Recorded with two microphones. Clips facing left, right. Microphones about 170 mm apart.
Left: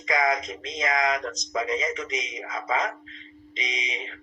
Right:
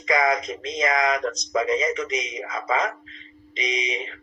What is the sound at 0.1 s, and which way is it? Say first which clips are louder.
A man's voice: right 3 dB; 75° right (ahead or behind).